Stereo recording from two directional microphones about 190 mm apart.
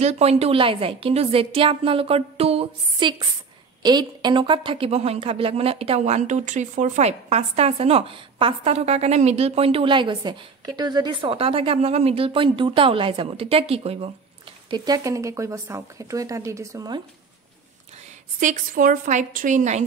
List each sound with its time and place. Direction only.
0.0 s a woman's voice: 35° right (ahead or behind)
14.7 s speech: 20° right (ahead or behind)
18.4 s a woman's voice: 45° right (ahead or behind)